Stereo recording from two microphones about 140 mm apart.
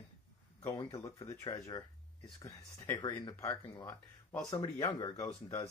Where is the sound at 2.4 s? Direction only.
25° left (ahead or behind).